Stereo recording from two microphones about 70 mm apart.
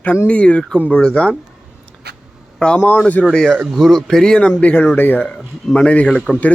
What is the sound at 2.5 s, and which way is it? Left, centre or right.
Speech, centre.